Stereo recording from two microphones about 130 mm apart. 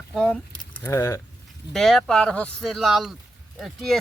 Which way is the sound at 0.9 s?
20° left (ahead or behind).